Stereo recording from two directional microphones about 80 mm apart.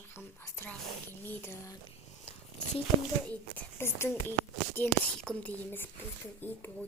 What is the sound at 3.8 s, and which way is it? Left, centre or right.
Speech, left.